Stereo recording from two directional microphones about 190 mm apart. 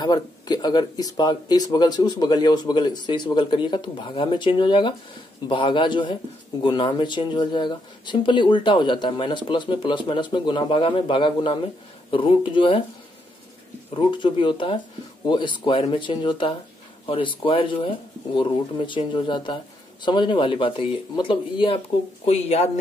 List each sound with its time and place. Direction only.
0.0 s speech: 20° left (ahead or behind)
13.9 s speech: 25° left (ahead or behind)